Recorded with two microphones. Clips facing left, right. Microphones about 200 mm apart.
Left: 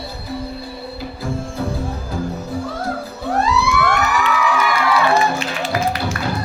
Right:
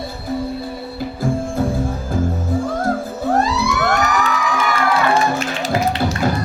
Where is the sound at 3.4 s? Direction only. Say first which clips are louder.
Left 1 dB; 40° right (ahead or behind).